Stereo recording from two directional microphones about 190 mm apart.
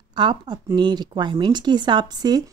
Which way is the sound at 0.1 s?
25° right (ahead or behind).